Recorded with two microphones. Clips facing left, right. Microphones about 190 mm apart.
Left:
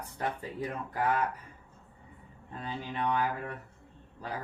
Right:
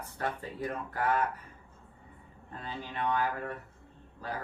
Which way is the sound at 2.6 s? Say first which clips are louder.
Left 1 dB; 15° left (ahead or behind).